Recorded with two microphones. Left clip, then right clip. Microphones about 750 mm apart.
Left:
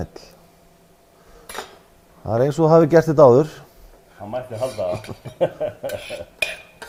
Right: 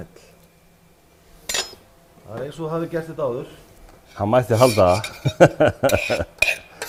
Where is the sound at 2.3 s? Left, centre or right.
Left.